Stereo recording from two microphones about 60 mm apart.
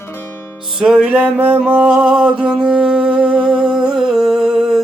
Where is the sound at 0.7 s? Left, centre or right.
Centre.